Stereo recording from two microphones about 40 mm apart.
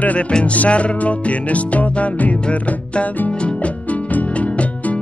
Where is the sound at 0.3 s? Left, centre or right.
Left.